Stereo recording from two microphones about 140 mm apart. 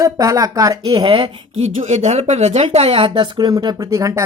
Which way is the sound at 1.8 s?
55° right (ahead or behind).